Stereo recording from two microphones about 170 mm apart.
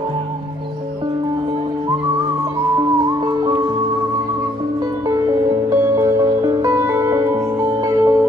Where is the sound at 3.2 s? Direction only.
25° right (ahead or behind).